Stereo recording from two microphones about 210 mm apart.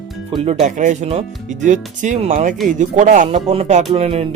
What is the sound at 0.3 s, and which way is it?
Speech, 25° right (ahead or behind).